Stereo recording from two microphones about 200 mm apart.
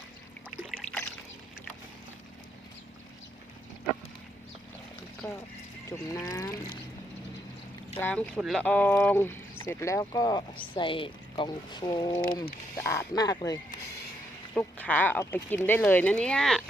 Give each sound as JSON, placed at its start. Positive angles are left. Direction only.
{"t": 0.8, "sound": "trickle", "side_deg": 5}
{"t": 6.1, "sound": "speech", "side_deg": 15}
{"t": 7.9, "sound": "speech", "side_deg": 10}
{"t": 14.5, "sound": "speech", "side_deg": 10}